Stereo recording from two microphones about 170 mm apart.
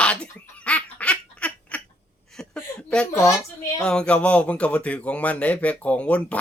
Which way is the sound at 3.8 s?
5° left (ahead or behind).